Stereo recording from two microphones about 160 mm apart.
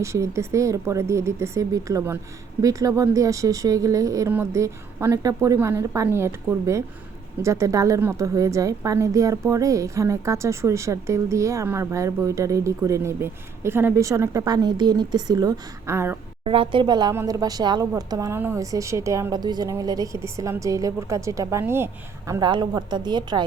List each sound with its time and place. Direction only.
0.0 s a woman's voice: 20° right (ahead or behind)
16.4 s a woman's voice: 35° right (ahead or behind); by 21.8 s 15° right (ahead or behind)
22.3 s a woman's voice: 25° right (ahead or behind)